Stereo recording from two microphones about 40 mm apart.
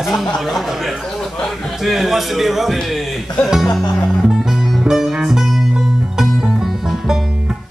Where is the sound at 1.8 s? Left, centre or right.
Centre.